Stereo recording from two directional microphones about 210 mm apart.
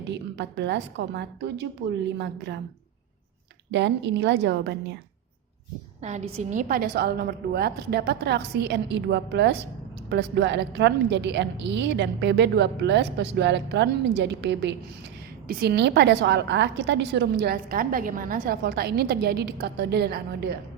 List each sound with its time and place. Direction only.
0.1 s a woman's voice: 55° right (ahead or behind)
3.7 s a woman's voice: 55° right (ahead or behind)
6.0 s a woman's voice: 35° right (ahead or behind); by 20.6 s 50° right (ahead or behind)